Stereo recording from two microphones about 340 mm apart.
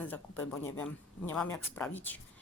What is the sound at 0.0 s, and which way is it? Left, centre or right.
Speech, centre.